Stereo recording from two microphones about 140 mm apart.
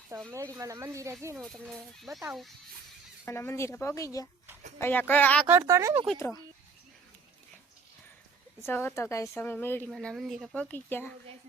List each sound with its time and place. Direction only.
0.3 s speech: 20° right (ahead or behind)
1.4 s speech: centre (ahead or behind)
3.2 s speech: 15° left (ahead or behind)
5.5 s speech: 20° right (ahead or behind)
6.1 s speech: 20° left (ahead or behind)
8.6 s speech: 15° left (ahead or behind)
9.9 s speech: centre (ahead or behind)
10.5 s speech: 10° left (ahead or behind)